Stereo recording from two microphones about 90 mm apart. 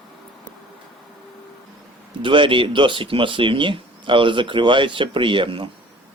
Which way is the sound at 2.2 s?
65° right (ahead or behind).